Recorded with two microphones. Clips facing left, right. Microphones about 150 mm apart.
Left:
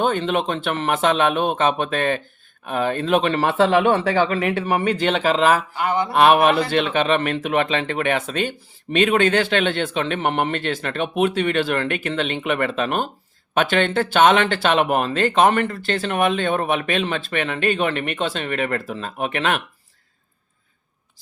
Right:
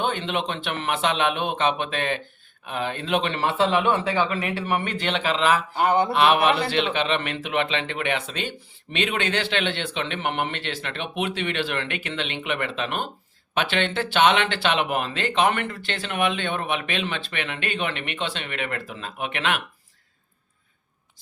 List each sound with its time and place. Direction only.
0.0 s a man's voice: 40° left (ahead or behind)
4.6 s a man's voice: 40° left (ahead or behind)
5.7 s mantra: 30° right (ahead or behind)
6.1 s a man's voice: 45° left (ahead or behind)